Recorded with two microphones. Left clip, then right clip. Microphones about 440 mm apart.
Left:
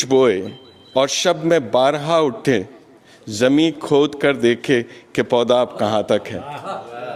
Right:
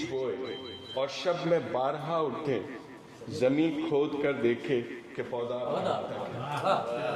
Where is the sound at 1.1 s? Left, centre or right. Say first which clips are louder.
Left 12 dB; left.